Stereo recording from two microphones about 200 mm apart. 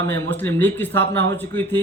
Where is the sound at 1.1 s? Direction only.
60° right (ahead or behind).